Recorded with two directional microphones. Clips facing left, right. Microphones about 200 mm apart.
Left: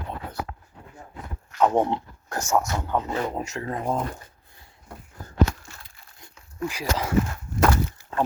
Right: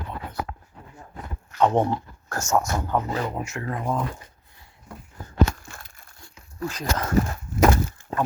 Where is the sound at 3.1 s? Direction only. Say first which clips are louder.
Left 1 dB; 25° left (ahead or behind).